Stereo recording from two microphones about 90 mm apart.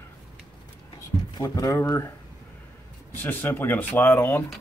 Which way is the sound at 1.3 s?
45° left (ahead or behind).